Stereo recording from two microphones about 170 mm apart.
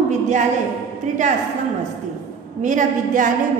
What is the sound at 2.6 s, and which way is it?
Speech, 45° right (ahead or behind).